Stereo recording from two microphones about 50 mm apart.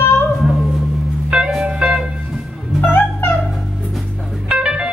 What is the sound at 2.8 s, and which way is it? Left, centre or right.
Music, left.